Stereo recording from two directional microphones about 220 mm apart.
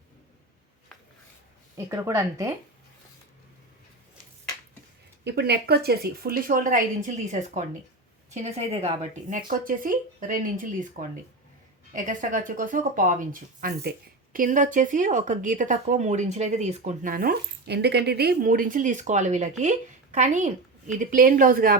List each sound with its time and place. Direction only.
1.7 s speech: 15° right (ahead or behind)
5.2 s a woman's voice: 50° right (ahead or behind); by 9.4 s 30° right (ahead or behind)
9.5 s speech: 40° right (ahead or behind)